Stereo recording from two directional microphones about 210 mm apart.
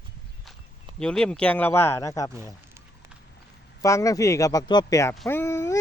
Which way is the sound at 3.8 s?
15° left (ahead or behind).